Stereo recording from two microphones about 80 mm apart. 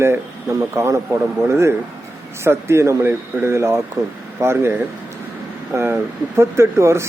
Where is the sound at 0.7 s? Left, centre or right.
Right.